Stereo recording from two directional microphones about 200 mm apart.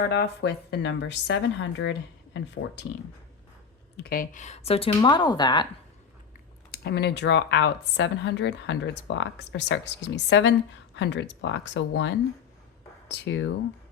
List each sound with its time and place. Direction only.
0.1 s speech: 55° left (ahead or behind)
4.0 s speech: 45° left (ahead or behind); by 5.6 s 20° left (ahead or behind)
6.7 s speech: 55° left (ahead or behind)